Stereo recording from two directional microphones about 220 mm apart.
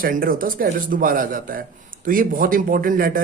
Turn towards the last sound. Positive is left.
turn(degrees=-40)  # may be behind; listen again after turning